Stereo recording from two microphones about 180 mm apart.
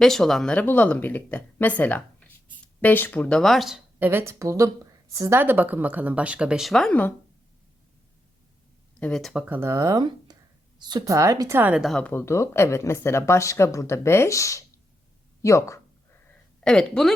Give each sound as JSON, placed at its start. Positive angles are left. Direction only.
{"t": 0.0, "sound": "speech", "side_deg": 0}
{"t": 9.0, "sound": "speech", "side_deg": 5}
{"t": 16.6, "sound": "a woman's voice", "side_deg": 5}